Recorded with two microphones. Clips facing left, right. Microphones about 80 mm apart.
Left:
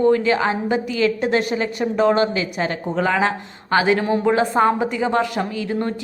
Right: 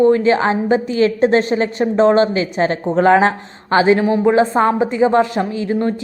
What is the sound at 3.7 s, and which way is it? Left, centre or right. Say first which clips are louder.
A woman's voice: right 4 dB; right.